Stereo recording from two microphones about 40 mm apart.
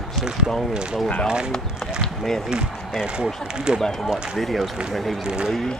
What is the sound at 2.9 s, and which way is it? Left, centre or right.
Speech, centre.